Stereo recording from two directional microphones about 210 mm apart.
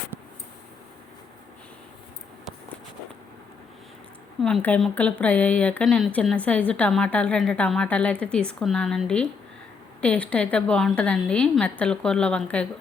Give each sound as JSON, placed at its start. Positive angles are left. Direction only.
{"t": 4.4, "sound": "a woman's voice", "side_deg": 5}